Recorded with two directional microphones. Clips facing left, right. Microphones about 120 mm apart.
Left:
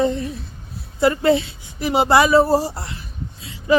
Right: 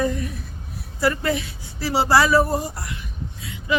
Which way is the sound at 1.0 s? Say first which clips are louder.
Left 6 dB; 25° left (ahead or behind).